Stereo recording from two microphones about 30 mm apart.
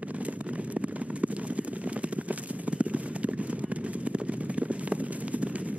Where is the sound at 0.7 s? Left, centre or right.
Right.